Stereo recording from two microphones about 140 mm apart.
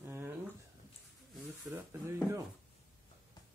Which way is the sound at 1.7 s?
20° right (ahead or behind).